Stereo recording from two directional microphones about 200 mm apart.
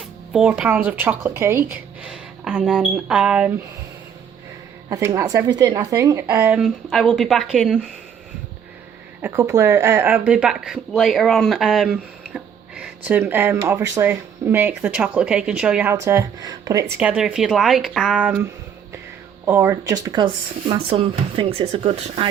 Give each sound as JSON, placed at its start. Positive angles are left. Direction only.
{"t": 0.3, "sound": "speech", "side_deg": -5}
{"t": 4.9, "sound": "speech", "side_deg": -15}
{"t": 9.2, "sound": "speech", "side_deg": -10}
{"t": 17.0, "sound": "a woman's voice", "side_deg": -5}
{"t": 19.5, "sound": "speech", "side_deg": -15}